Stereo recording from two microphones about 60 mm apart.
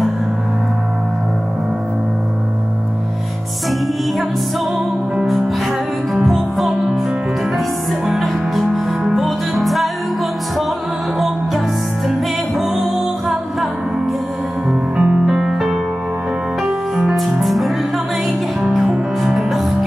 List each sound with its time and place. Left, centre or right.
6.2 s music: centre
8.0 s music: centre
11.1 s music: centre
14.7 s music: centre
15.2 s music: centre